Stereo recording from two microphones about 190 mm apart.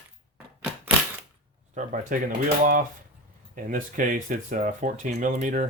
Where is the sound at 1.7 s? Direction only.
45° right (ahead or behind).